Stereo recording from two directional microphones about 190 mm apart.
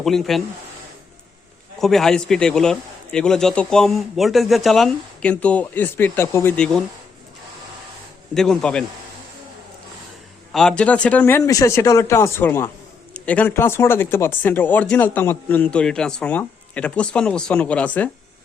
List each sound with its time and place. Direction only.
0.0 s a man's voice: centre (ahead or behind)
1.8 s a man's voice: centre (ahead or behind)
8.4 s a man's voice: 5° left (ahead or behind)
10.5 s speech: 5° left (ahead or behind)